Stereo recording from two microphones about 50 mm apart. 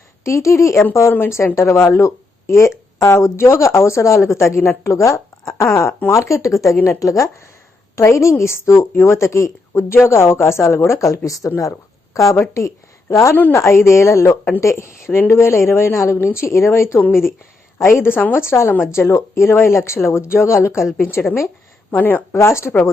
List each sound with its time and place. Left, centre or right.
0.3 s speech: left
1.5 s speech: left
9.9 s a woman's voice: left
10.8 s speech: left
13.5 s a woman's voice: left
14.6 s a woman's voice: left
17.7 s a woman's voice: left
18.2 s a woman's voice: left
18.9 s a woman's voice: left
21.9 s speech: left
22.4 s speech: left